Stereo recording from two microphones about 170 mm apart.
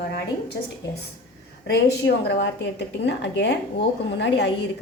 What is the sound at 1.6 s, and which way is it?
A woman's voice, 80° left.